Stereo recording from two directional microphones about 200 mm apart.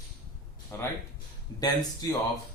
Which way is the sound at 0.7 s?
10° left (ahead or behind).